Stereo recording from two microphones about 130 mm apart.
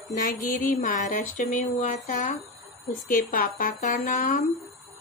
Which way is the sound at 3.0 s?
90° left.